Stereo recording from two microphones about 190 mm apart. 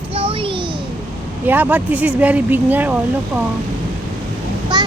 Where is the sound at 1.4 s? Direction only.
10° right (ahead or behind).